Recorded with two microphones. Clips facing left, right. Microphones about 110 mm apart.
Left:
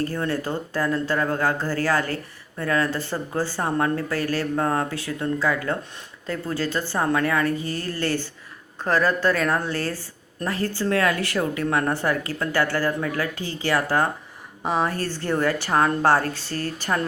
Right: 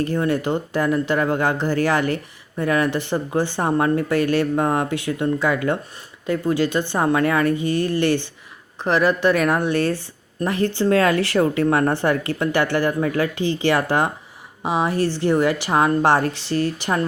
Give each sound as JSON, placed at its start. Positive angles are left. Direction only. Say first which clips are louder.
{"t": 0.0, "sound": "a woman's voice", "louder": "right 5 dB", "side_deg": -20}
{"t": 14.6, "sound": "a woman's voice", "louder": "right 4 dB", "side_deg": -10}